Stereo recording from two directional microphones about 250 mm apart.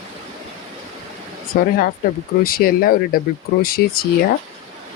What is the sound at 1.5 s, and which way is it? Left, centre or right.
Speech, left.